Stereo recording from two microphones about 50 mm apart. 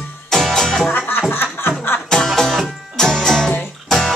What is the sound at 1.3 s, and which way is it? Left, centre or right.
Chuckle, left.